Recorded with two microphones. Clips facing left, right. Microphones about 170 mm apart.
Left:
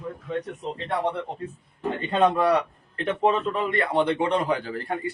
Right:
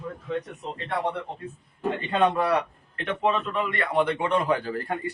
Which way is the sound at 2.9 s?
35° left (ahead or behind).